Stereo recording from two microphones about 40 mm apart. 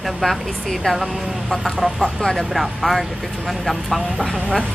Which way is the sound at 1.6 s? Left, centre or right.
Centre.